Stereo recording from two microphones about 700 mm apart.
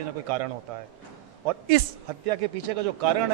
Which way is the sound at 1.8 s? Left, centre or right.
Right.